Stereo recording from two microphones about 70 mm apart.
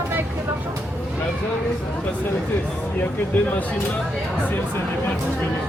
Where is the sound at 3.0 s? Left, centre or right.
Left.